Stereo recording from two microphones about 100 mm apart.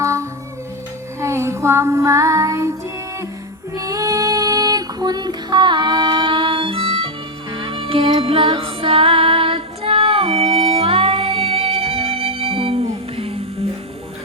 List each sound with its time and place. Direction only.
0.0 s music: 30° right (ahead or behind)
1.2 s child singing: 25° right (ahead or behind)
3.8 s female singing: 35° right (ahead or behind); by 7.1 s 60° right (ahead or behind)
7.5 s music: 65° right (ahead or behind); by 13.4 s 80° right